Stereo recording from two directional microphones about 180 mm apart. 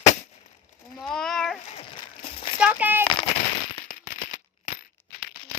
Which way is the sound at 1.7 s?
30° left (ahead or behind).